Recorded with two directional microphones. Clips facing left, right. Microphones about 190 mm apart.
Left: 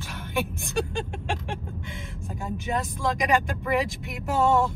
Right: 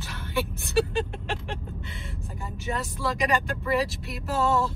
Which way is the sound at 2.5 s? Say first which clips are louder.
Left 3 dB; 15° left (ahead or behind).